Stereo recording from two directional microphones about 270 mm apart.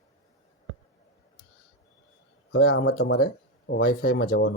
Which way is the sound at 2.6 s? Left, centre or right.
Left.